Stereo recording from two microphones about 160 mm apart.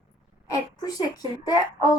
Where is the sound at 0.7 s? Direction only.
25° left (ahead or behind).